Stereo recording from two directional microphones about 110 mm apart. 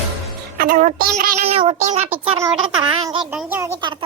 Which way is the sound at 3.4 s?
20° right (ahead or behind).